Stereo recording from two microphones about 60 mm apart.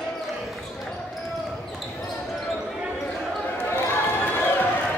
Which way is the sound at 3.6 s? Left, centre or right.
Left.